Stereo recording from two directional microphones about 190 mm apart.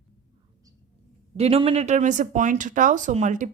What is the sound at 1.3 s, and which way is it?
Speech, 30° right (ahead or behind).